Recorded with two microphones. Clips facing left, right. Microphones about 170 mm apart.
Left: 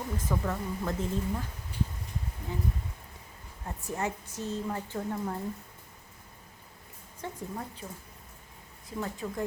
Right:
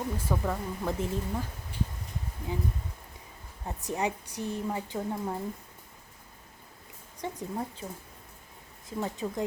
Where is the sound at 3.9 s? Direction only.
15° right (ahead or behind).